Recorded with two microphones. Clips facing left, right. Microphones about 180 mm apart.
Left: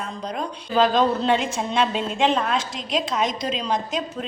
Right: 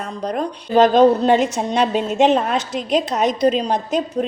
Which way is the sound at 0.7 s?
45° right (ahead or behind).